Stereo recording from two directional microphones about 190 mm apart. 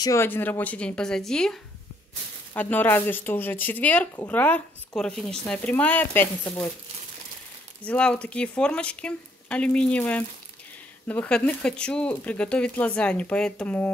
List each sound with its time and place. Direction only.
0.0 s speech: 15° left (ahead or behind)
6.4 s speech: 25° left (ahead or behind)
7.8 s speech: 5° left (ahead or behind)